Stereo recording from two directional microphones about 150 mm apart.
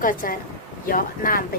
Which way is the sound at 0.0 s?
65° left (ahead or behind).